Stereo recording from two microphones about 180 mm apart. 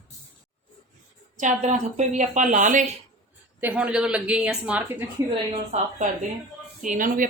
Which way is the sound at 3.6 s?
10° right (ahead or behind).